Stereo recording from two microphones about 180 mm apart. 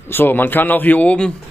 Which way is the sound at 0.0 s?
10° left (ahead or behind).